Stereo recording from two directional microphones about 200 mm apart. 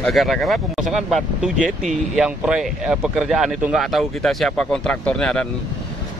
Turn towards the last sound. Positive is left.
turn(degrees=5)  # may be behind; listen again after turning